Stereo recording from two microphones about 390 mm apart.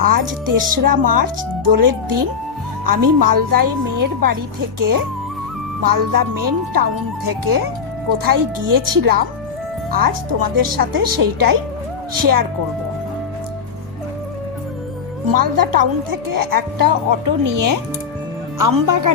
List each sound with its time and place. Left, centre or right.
0.0 s speech: right
5.8 s a woman's voice: right
15.3 s a woman's voice: right